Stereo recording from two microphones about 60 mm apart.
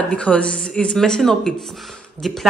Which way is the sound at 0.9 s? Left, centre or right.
Centre.